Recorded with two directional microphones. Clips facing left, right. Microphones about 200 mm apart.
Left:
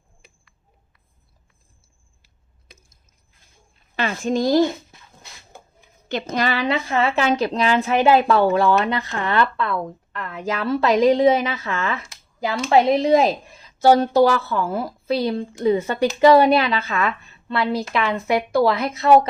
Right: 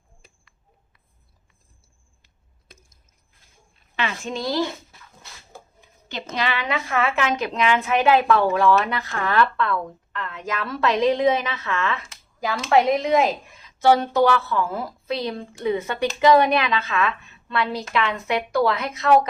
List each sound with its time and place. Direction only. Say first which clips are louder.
3.9 s a woman's voice: left 6 dB; 40° left (ahead or behind)
6.3 s speech: left 4 dB; 40° left (ahead or behind)